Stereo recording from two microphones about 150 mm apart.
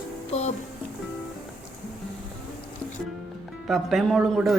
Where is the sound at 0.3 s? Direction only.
50° left (ahead or behind).